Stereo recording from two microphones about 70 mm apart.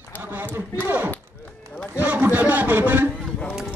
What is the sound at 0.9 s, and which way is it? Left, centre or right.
A man's voice, right.